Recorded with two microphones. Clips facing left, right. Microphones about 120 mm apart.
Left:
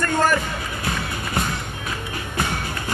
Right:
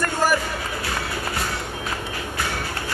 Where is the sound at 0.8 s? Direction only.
20° left (ahead or behind).